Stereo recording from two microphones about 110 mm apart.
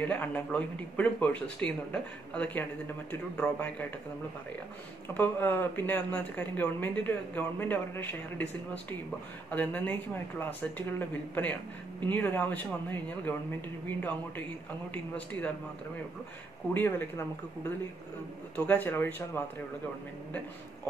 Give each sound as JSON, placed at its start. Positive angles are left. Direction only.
{"t": 0.0, "sound": "speech", "side_deg": 15}
{"t": 5.0, "sound": "speech", "side_deg": 15}
{"t": 9.5, "sound": "speech", "side_deg": 15}
{"t": 16.7, "sound": "speech", "side_deg": 20}